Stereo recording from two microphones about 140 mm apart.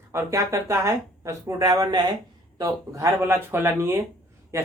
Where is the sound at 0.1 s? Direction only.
20° right (ahead or behind).